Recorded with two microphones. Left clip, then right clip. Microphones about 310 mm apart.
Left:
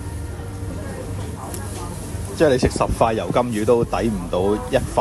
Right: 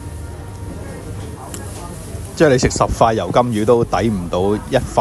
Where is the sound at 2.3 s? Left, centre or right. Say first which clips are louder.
Right 4 dB; left.